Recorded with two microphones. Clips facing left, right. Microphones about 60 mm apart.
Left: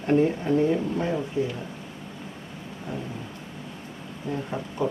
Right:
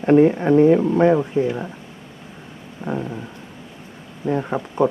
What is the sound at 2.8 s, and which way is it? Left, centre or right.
Dog, right.